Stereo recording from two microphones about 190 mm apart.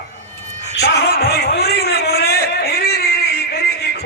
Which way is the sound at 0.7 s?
60° left (ahead or behind).